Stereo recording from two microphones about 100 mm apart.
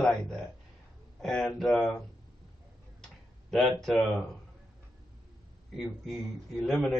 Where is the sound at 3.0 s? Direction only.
5° left (ahead or behind).